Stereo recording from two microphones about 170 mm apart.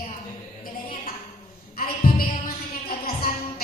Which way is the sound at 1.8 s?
55° left (ahead or behind).